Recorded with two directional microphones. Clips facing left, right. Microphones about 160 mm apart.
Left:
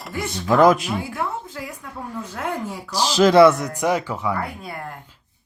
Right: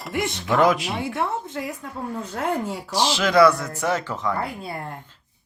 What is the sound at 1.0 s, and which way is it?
A woman's voice, 25° right (ahead or behind).